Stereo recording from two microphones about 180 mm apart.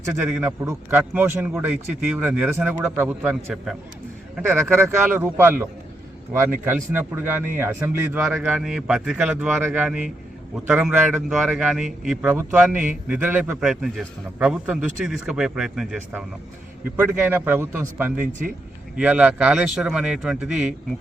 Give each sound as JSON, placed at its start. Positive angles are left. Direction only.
{"t": 0.2, "sound": "a man's voice", "side_deg": -5}